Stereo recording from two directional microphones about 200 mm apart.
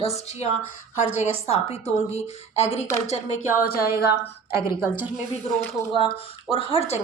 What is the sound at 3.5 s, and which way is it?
A woman's voice, 45° left (ahead or behind).